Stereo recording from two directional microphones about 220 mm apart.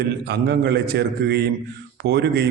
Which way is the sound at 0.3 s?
45° right (ahead or behind).